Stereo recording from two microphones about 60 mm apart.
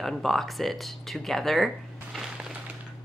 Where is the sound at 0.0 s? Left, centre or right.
Centre.